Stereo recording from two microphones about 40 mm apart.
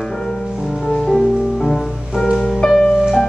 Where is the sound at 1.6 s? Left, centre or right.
Centre.